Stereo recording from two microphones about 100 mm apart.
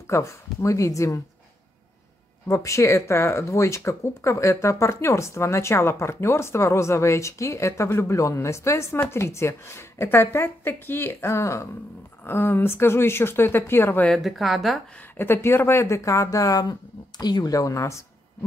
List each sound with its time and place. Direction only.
0.0 s speech: 30° left (ahead or behind)
2.4 s speech: 30° left (ahead or behind)
14.0 s speech: centre (ahead or behind)
15.1 s speech: 20° left (ahead or behind)